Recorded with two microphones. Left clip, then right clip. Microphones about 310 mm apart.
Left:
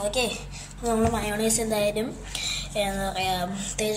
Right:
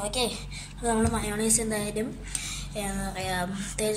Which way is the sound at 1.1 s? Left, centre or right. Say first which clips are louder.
Left 3 dB; right.